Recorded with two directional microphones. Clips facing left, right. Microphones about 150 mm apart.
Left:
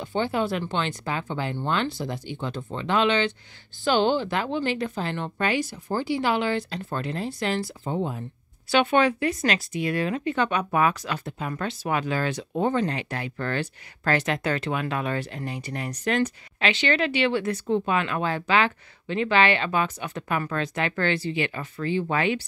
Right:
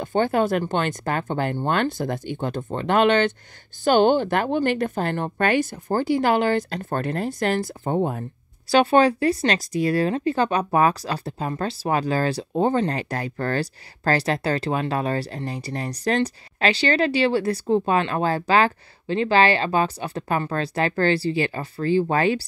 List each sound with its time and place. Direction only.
0.0 s speech: 45° right (ahead or behind)
8.6 s speech: 35° right (ahead or behind)